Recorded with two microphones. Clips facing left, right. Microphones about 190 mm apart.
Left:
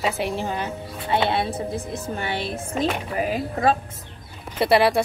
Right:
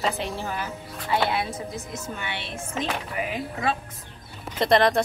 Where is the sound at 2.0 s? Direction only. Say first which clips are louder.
Left 6 dB; 40° left (ahead or behind).